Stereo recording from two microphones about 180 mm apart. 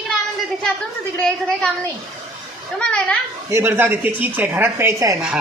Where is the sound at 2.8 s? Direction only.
5° left (ahead or behind).